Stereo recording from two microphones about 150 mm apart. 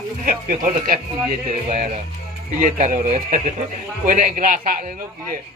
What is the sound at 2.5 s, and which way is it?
Speech, 55° right (ahead or behind).